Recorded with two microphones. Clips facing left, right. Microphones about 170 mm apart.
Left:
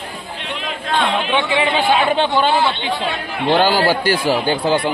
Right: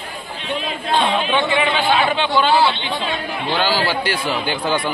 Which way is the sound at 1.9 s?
40° left (ahead or behind).